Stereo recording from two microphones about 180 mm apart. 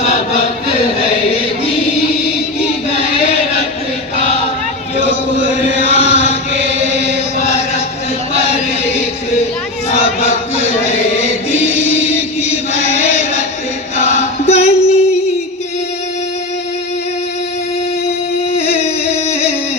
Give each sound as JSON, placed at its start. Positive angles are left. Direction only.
{"t": 0.0, "sound": "chant", "side_deg": 35}
{"t": 2.9, "sound": "chant", "side_deg": 35}
{"t": 4.9, "sound": "chant", "side_deg": 35}
{"t": 8.8, "sound": "chant", "side_deg": 35}
{"t": 13.9, "sound": "choir", "side_deg": 40}
{"t": 18.5, "sound": "a sound", "side_deg": 35}